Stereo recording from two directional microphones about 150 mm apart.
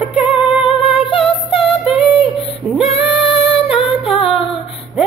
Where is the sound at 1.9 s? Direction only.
40° left (ahead or behind).